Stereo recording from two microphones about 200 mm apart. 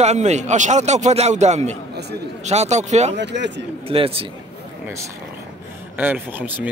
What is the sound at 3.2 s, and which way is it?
Speech, 60° right (ahead or behind).